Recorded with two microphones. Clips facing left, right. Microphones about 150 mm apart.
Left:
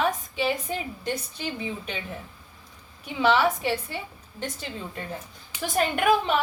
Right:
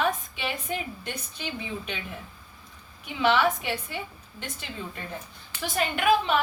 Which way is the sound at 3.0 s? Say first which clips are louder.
Left 1 dB; 35° left (ahead or behind).